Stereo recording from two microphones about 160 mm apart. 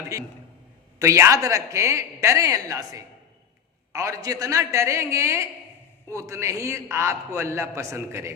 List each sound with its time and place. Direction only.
0.1 s a woman's voice: 20° right (ahead or behind)